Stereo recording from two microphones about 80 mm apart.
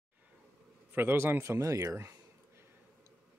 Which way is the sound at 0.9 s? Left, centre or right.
Right.